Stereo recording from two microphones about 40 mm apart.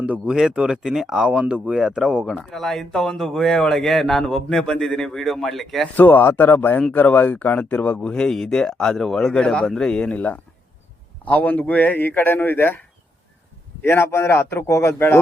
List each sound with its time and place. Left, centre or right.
0.3 s speech: centre
0.5 s speech: centre
0.9 s speech: centre
2.4 s speech: centre
6.0 s speech: left
7.9 s speech: left
9.3 s a man's voice: left
10.2 s speech: left
13.8 s a man's voice: left